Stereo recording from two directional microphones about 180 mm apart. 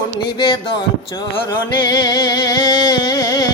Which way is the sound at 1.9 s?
25° left (ahead or behind).